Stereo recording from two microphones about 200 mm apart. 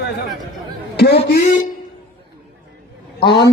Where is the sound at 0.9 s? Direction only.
50° left (ahead or behind).